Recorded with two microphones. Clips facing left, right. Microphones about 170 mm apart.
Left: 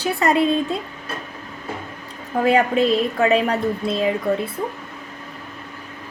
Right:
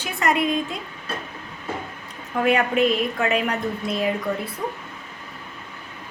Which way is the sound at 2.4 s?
30° left (ahead or behind).